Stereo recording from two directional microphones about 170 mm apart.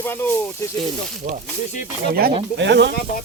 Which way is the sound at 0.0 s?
10° left (ahead or behind).